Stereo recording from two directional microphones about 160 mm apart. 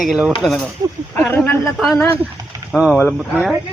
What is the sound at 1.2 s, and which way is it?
Speech, 10° left (ahead or behind).